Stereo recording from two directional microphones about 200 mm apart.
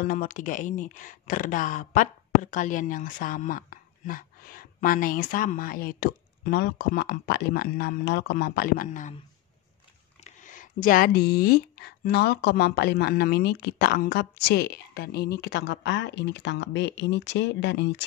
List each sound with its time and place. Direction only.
0.0 s speech: 45° left (ahead or behind)
10.2 s speech: 40° left (ahead or behind); by 18.0 s 60° left (ahead or behind)